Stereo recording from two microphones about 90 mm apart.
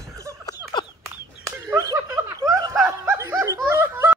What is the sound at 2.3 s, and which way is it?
Snicker, 40° right (ahead or behind).